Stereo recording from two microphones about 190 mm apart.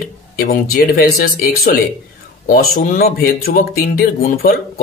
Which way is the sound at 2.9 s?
50° left (ahead or behind).